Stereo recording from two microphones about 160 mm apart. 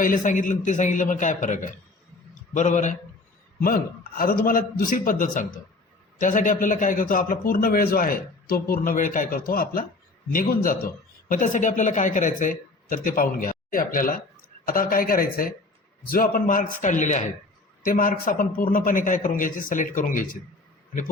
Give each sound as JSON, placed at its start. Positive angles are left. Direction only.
{"t": 0.0, "sound": "a man's voice", "side_deg": 55}
{"t": 4.2, "sound": "speech", "side_deg": 65}